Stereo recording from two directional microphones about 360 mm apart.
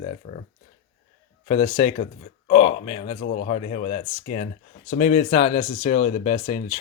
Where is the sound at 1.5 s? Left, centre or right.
Centre.